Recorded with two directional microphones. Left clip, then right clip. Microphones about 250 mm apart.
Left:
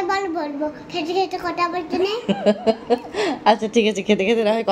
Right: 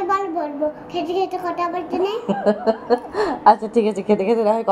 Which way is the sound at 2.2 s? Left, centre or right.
Left.